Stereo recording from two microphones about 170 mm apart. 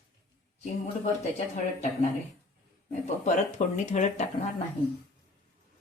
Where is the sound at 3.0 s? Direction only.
45° left (ahead or behind).